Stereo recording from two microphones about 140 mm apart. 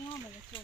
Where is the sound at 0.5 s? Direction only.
35° left (ahead or behind).